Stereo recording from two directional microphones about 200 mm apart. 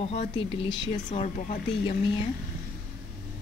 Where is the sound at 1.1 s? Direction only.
40° left (ahead or behind).